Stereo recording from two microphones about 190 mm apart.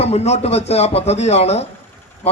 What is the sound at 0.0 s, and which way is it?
A man's voice, 35° left (ahead or behind).